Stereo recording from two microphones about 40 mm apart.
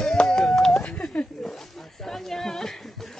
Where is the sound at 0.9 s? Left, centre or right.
Left.